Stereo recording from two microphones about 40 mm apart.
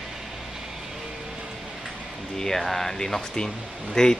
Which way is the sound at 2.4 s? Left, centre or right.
Centre.